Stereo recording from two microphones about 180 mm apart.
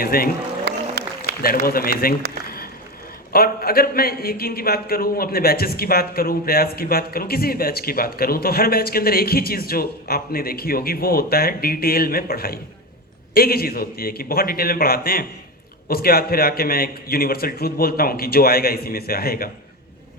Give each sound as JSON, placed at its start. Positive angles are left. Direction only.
{"t": 0.0, "sound": "a man's voice", "side_deg": 55}
{"t": 0.7, "sound": "music", "side_deg": -70}
{"t": 1.4, "sound": "a man's voice", "side_deg": 55}
{"t": 3.3, "sound": "a man's voice", "side_deg": 55}